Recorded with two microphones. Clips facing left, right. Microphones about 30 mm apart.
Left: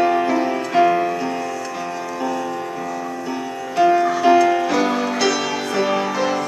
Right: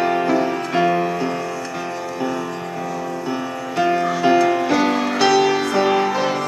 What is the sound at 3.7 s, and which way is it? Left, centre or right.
Music, centre.